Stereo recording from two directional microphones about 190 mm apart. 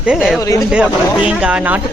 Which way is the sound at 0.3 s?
15° left (ahead or behind).